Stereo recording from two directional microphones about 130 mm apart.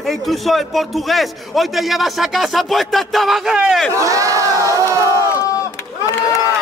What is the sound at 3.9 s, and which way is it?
Crowd, 25° right (ahead or behind).